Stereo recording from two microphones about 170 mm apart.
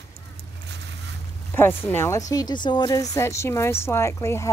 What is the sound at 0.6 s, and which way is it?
Boat, 90° right.